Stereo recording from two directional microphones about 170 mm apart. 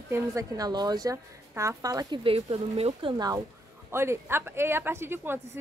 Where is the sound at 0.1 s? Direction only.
20° right (ahead or behind).